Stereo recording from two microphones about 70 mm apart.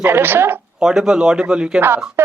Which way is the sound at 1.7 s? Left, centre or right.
Right.